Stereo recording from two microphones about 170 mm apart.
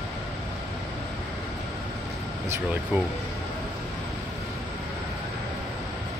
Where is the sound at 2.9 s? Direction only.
10° right (ahead or behind).